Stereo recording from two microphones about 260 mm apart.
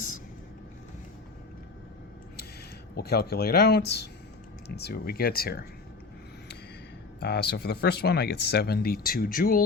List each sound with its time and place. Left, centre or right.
2.9 s speech: left
7.2 s speech: left